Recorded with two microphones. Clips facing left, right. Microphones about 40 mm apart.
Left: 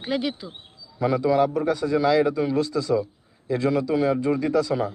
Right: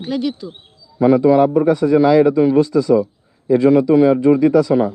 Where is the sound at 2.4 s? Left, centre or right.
Right.